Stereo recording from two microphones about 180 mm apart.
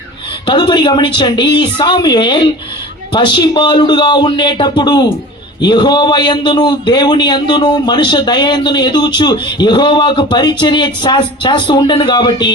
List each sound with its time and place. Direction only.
0.4 s a man's voice: 25° left (ahead or behind)